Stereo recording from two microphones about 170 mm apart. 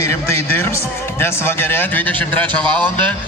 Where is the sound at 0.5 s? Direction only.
15° left (ahead or behind).